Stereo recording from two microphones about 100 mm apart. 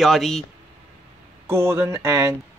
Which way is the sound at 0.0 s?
Centre (ahead or behind).